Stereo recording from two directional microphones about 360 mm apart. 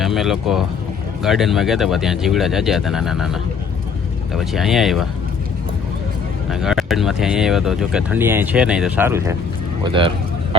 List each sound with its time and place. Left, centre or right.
0.0 s speech: centre
4.4 s speech: centre
6.5 s speech: centre